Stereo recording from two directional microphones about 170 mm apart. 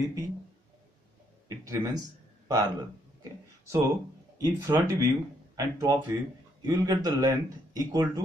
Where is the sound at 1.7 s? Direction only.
20° right (ahead or behind).